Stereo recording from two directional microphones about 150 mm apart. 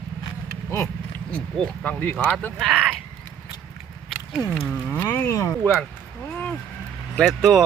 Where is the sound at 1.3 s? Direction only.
10° left (ahead or behind).